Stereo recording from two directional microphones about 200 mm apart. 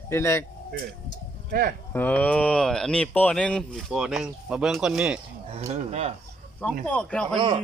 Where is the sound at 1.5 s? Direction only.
45° right (ahead or behind).